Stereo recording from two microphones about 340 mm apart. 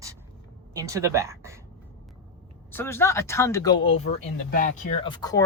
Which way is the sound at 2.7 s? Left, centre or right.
Centre.